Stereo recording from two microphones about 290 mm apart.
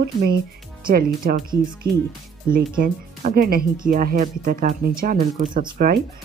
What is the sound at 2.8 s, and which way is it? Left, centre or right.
Speech, right.